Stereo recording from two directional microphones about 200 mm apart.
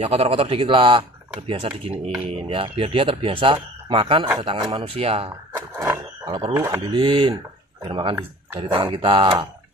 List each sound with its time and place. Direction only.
0.0 s speech: 30° right (ahead or behind)
5.8 s frog: 15° right (ahead or behind)
6.5 s speech: 15° right (ahead or behind)